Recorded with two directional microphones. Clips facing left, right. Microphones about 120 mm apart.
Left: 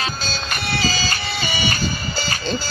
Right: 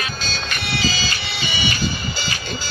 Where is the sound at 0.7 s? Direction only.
40° left (ahead or behind).